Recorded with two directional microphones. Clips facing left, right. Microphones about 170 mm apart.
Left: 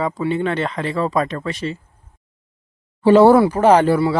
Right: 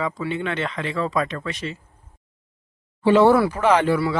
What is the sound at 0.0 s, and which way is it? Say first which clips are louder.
Speech: left 5 dB; 35° left (ahead or behind).